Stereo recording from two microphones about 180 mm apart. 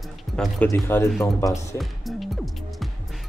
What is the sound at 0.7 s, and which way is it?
Speech, 15° left (ahead or behind).